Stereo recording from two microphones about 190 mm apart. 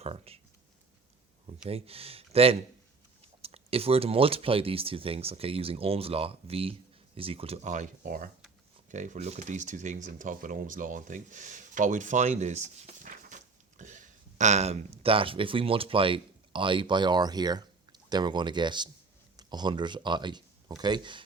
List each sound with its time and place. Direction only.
0.0 s speech: 30° right (ahead or behind)
1.6 s speech: 30° right (ahead or behind)